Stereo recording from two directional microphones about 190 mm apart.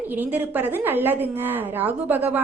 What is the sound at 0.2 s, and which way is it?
A woman's voice, 10° right (ahead or behind).